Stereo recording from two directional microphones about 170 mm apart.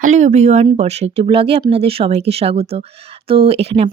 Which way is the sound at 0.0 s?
45° right (ahead or behind).